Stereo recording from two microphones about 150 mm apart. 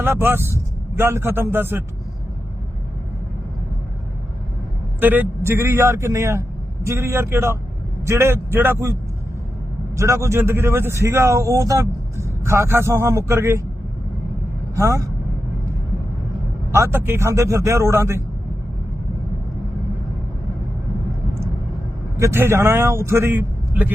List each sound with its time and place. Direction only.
0.0 s a man's voice: 15° right (ahead or behind)
4.9 s speech: 15° right (ahead or behind)
14.8 s speech: 20° right (ahead or behind)
16.7 s speech: 15° right (ahead or behind)
22.2 s speech: 15° right (ahead or behind)